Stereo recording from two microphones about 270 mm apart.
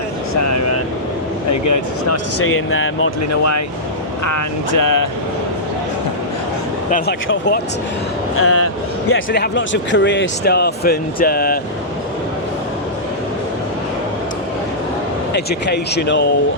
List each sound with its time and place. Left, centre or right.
0.3 s vehicle: left
1.5 s speech: left
2.4 s speech: left
4.3 s speech: left
6.9 s speech: left
8.4 s speech: left
15.3 s speech: left